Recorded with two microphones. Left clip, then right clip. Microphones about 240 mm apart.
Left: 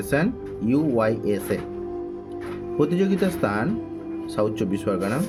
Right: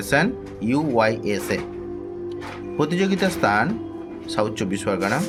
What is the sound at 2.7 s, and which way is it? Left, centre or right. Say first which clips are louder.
Speech: even; centre.